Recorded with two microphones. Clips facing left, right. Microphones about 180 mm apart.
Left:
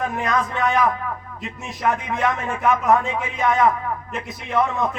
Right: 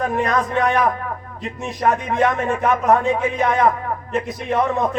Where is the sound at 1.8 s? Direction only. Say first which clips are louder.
Right 4 dB; 40° right (ahead or behind).